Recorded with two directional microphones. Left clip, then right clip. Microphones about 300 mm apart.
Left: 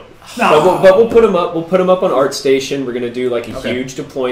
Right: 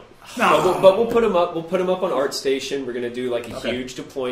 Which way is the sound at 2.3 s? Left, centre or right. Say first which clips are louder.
Left 9 dB; left.